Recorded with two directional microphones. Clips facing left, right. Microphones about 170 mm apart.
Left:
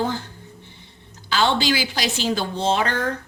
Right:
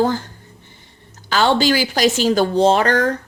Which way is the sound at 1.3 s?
45° right (ahead or behind).